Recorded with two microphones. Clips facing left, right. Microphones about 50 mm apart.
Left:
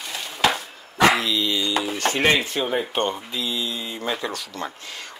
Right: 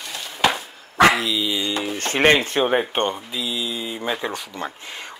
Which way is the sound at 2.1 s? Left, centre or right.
Right.